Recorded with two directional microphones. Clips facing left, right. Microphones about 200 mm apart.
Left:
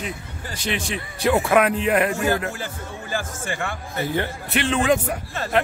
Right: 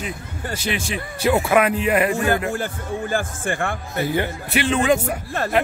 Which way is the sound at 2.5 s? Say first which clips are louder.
Right 7 dB; 55° right (ahead or behind).